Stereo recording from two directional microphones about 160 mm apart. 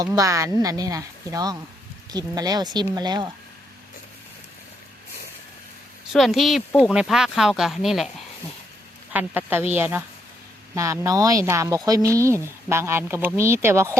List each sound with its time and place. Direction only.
0.0 s a woman's voice: 20° right (ahead or behind)
6.1 s speech: centre (ahead or behind)
9.1 s a woman's voice: 10° right (ahead or behind)